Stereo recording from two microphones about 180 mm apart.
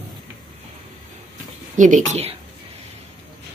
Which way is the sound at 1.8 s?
45° right (ahead or behind).